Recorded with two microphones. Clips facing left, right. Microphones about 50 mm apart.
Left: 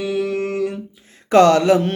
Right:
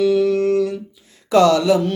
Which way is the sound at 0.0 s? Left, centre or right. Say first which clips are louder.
Right 6 dB; centre.